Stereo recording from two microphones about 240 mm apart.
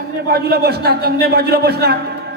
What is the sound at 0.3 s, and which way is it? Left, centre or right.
A man's voice, right.